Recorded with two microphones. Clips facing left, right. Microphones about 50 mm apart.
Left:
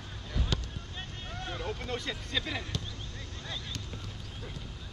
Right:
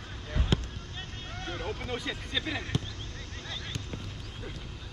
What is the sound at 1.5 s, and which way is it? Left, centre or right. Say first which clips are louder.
Vehicle: right 1 dB; centre.